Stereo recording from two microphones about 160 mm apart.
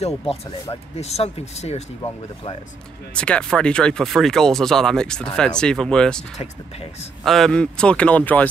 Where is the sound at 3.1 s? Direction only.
5° left (ahead or behind).